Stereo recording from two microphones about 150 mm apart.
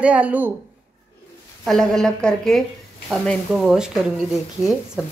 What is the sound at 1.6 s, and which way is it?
Speech, centre (ahead or behind).